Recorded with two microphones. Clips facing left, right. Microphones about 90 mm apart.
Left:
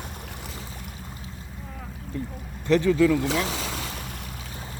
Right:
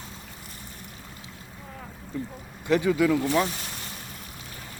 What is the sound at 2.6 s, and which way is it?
Speech, 15° right (ahead or behind).